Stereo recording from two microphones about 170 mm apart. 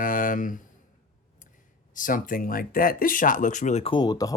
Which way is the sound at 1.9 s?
50° left (ahead or behind).